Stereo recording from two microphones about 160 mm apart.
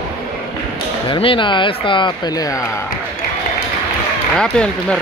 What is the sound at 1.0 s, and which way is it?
Speech, 30° left (ahead or behind).